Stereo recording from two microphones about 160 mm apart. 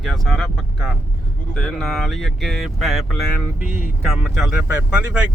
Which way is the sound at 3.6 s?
55° left (ahead or behind).